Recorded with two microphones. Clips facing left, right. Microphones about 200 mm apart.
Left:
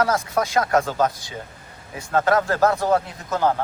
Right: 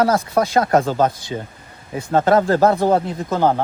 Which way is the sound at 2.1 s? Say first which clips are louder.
Right 5 dB; 30° right (ahead or behind).